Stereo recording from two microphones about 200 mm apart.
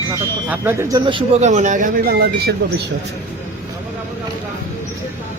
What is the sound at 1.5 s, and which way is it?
Speech, 35° right (ahead or behind).